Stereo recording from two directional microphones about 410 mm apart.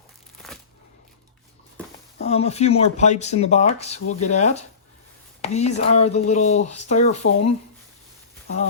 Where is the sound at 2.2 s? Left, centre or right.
Centre.